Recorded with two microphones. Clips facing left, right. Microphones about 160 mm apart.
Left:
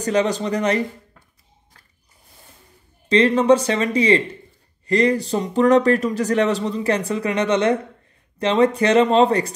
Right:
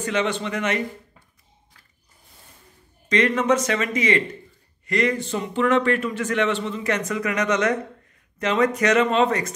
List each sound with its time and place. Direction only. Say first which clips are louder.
0.0 s a man's voice: left 4 dB; 35° left (ahead or behind)
3.1 s a man's voice: left 5 dB; 30° left (ahead or behind)